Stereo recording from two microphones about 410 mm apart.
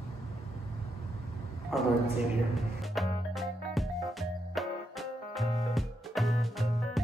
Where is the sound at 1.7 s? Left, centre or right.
Centre.